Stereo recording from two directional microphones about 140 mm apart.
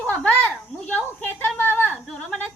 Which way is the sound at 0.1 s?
10° left (ahead or behind).